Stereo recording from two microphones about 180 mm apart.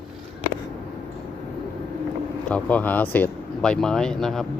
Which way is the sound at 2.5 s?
5° left (ahead or behind).